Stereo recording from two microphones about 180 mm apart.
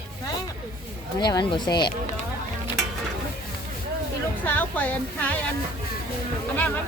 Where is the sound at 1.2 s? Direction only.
25° left (ahead or behind).